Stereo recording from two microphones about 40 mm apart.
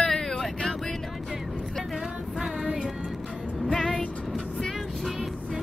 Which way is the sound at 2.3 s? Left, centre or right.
Centre.